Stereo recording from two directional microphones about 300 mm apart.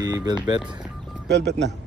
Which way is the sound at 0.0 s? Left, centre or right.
Centre.